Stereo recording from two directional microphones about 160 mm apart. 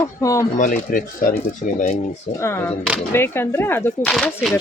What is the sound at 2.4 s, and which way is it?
Speech, 15° left (ahead or behind).